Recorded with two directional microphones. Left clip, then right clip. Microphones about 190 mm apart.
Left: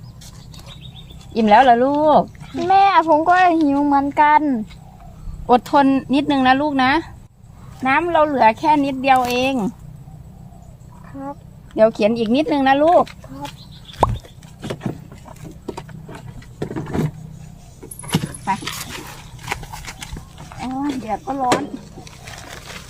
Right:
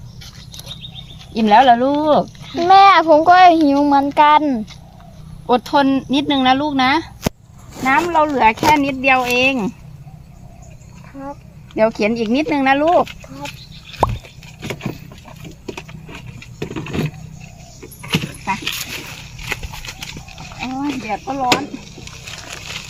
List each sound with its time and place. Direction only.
1.3 s speech: 30° left (ahead or behind)
2.6 s a child's voice: 45° right (ahead or behind)
3.8 s speech: 35° right (ahead or behind)
5.5 s speech: 40° left (ahead or behind)
11.2 s a sound: 20° right (ahead or behind)
11.8 s speech: 25° left (ahead or behind); by 13.5 s 5° left (ahead or behind)
14.0 s a sound: centre (ahead or behind)
14.6 s vehicle: 5° left (ahead or behind)
15.6 s a sound: 10° left (ahead or behind)
18.0 s keys jangling: 15° left (ahead or behind)
18.5 s dog: 10° left (ahead or behind)
19.5 s horse: 15° left (ahead or behind)
21.1 s a sound: centre (ahead or behind)